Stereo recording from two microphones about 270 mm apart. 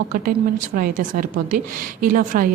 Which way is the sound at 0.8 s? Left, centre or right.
Right.